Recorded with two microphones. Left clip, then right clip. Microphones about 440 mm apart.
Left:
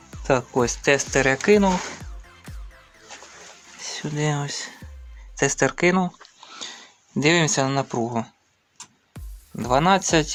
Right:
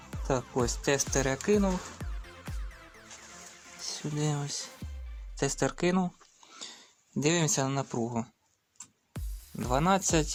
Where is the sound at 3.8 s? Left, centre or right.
Left.